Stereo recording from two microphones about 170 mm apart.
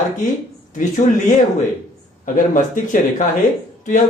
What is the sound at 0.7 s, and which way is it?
Speech, 50° left (ahead or behind).